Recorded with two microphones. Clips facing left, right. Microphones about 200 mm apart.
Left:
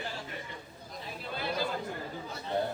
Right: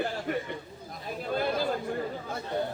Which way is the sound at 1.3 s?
50° right (ahead or behind).